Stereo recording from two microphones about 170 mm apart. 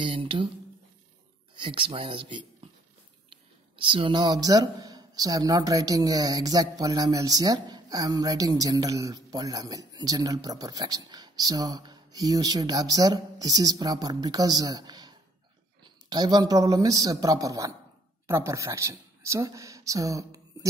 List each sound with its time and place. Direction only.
0.0 s speech: 30° right (ahead or behind)
1.5 s speech: 30° right (ahead or behind)